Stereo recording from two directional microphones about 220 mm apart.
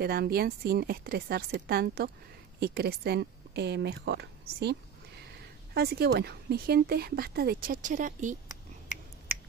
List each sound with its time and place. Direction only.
0.0 s speech: 45° right (ahead or behind)
5.8 s speech: 45° right (ahead or behind)